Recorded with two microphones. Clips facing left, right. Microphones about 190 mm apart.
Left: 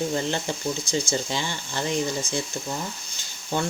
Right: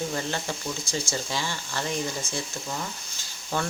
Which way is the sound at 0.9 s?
20° left (ahead or behind).